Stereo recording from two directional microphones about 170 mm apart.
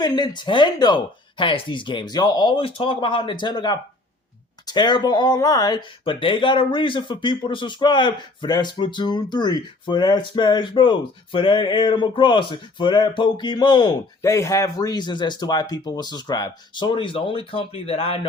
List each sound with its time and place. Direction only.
0.0 s speech: 25° left (ahead or behind)